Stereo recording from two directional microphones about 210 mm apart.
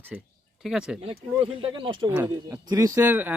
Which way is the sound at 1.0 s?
25° right (ahead or behind).